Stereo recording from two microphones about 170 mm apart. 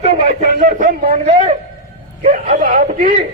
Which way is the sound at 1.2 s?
35° right (ahead or behind).